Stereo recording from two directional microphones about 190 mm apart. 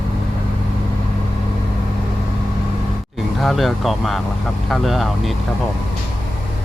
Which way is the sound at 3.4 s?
Centre (ahead or behind).